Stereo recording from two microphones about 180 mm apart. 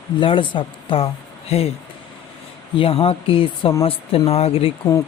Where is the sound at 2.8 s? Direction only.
30° left (ahead or behind).